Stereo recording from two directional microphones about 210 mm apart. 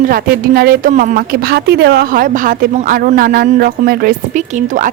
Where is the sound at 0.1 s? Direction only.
45° right (ahead or behind).